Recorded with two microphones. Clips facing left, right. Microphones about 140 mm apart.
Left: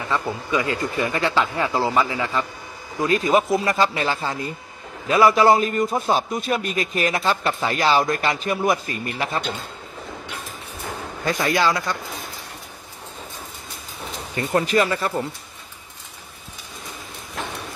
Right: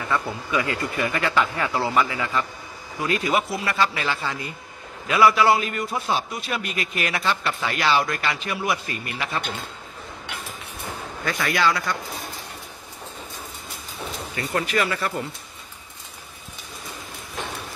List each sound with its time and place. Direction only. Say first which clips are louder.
0.1 s a man's voice: left 2 dB; 20° left (ahead or behind); by 9.4 s 40° left (ahead or behind)
11.2 s speech: left 2 dB; 30° left (ahead or behind)
14.3 s speech: left 5 dB; 30° left (ahead or behind)